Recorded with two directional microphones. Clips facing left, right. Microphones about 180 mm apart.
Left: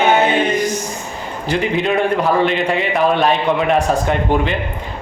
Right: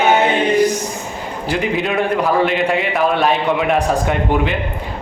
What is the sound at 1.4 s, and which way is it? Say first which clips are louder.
Speech: left 1 dB; 5° right (ahead or behind).